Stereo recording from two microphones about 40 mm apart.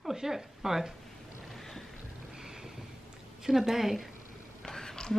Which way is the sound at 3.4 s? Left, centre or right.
Centre.